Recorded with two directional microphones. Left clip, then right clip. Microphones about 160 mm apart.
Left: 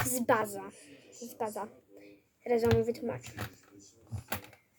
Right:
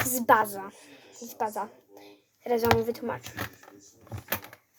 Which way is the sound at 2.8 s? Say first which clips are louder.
Right 2 dB; 10° left (ahead or behind).